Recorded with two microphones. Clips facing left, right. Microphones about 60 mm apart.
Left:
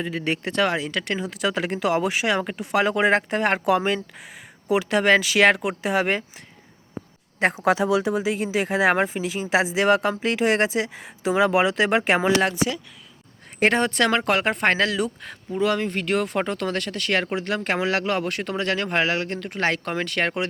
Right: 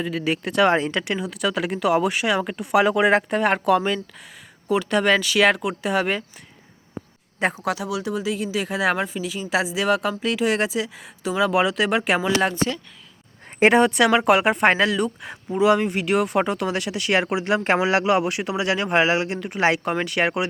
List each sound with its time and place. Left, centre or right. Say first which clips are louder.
0.0 s speech: right 2 dB; centre
0.7 s speech: right 5 dB; right
1.0 s speech: right 1 dB; centre
3.8 s speech: even; centre
7.6 s speech: left 6 dB; left
12.4 s speech: even; centre
15.2 s speech: right 4 dB; centre